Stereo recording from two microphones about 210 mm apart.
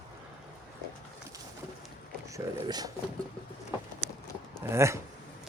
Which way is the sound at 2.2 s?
15° right (ahead or behind).